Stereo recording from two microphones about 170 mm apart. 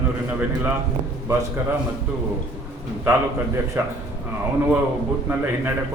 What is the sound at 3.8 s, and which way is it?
Speech, 15° right (ahead or behind).